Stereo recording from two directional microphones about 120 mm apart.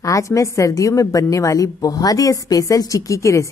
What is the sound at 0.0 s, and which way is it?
A woman's voice, 25° left (ahead or behind).